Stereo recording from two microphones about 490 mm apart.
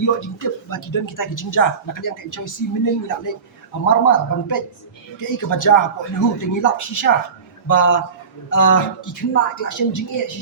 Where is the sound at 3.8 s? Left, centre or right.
Left.